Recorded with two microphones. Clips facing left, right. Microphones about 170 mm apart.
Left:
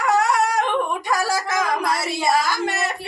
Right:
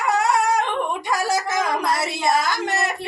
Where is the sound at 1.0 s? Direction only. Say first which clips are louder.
Even; 25° right (ahead or behind).